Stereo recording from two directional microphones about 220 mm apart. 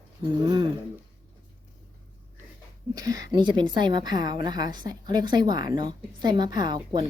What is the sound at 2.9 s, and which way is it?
A woman's voice, 15° right (ahead or behind).